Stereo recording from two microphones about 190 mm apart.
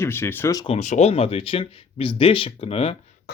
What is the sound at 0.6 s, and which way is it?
Speech, 35° left (ahead or behind).